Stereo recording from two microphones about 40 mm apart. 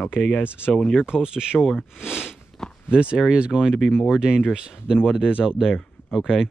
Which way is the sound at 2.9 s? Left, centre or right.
Right.